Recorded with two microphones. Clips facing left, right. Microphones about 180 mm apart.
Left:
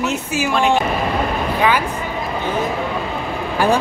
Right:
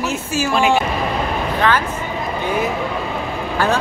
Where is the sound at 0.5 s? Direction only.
5° right (ahead or behind).